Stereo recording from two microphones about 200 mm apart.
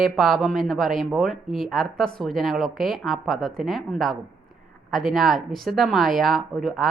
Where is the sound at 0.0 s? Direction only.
Centre (ahead or behind).